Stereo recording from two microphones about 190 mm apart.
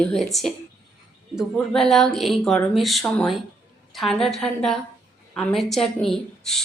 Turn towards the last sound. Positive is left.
turn(degrees=0)  # may be behind; listen again after turning